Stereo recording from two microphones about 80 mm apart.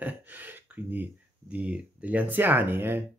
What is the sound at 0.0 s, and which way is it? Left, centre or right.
Speech, right.